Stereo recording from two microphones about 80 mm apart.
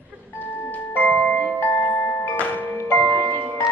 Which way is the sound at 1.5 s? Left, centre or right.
Left.